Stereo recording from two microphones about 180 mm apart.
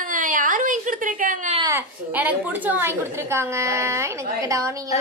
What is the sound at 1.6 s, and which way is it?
A woman's voice, 10° right (ahead or behind).